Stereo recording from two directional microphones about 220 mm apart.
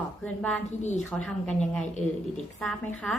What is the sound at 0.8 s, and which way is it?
Speech, 30° left (ahead or behind).